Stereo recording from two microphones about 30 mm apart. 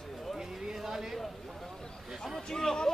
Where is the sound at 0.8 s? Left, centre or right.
Centre.